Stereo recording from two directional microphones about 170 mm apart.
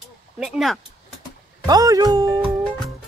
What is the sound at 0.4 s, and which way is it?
Speech, centre (ahead or behind).